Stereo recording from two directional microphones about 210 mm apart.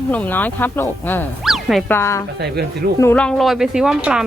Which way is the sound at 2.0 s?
15° left (ahead or behind).